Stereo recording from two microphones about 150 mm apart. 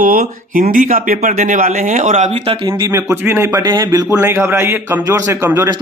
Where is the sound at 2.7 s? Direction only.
25° right (ahead or behind).